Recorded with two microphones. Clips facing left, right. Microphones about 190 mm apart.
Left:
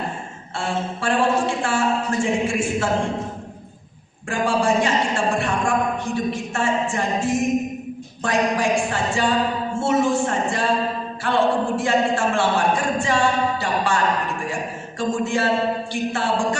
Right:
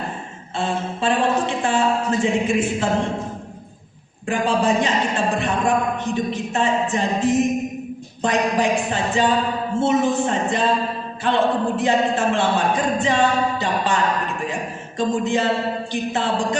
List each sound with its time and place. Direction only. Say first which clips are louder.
0.5 s a woman's voice: right 1 dB; 20° right (ahead or behind)
4.3 s speech: right 1 dB; 20° right (ahead or behind)